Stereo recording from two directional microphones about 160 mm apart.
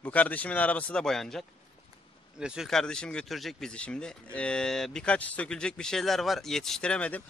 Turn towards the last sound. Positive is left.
turn(degrees=10)  # may be behind; listen again after turning